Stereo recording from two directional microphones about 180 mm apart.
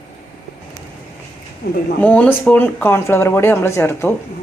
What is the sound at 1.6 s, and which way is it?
Speech, 60° left (ahead or behind).